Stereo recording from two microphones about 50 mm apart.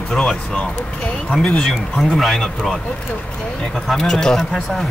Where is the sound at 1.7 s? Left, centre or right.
Centre.